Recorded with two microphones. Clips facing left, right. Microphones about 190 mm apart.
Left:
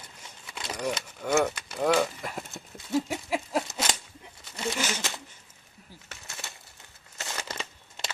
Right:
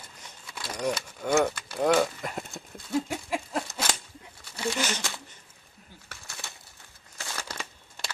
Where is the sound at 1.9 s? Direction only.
Centre (ahead or behind).